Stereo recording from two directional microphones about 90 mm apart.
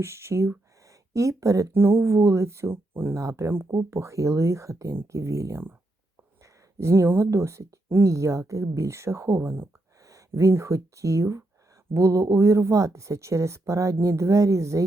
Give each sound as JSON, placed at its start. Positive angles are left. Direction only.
{"t": 0.0, "sound": "speech", "side_deg": -30}
{"t": 1.7, "sound": "speech", "side_deg": -25}
{"t": 3.2, "sound": "speech", "side_deg": -35}
{"t": 10.0, "sound": "speech", "side_deg": -40}